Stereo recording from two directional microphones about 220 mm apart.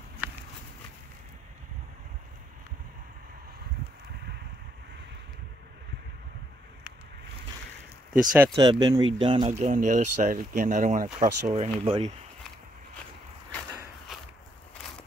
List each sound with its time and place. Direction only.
0.2 s a sound: 5° right (ahead or behind)
8.1 s speech: 5° right (ahead or behind)
8.5 s speech: 20° right (ahead or behind)